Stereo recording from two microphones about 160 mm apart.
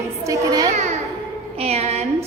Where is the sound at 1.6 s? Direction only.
40° right (ahead or behind).